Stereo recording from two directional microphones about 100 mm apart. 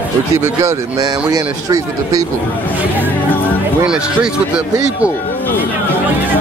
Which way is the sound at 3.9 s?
10° right (ahead or behind).